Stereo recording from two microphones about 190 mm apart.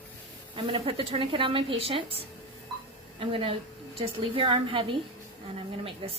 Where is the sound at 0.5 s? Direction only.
30° right (ahead or behind).